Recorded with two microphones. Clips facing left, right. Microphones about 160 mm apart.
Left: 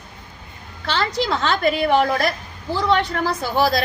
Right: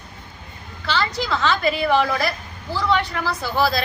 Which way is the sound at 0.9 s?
50° left (ahead or behind).